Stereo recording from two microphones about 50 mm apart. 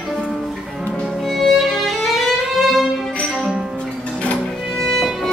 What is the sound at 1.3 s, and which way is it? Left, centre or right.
Violin, centre.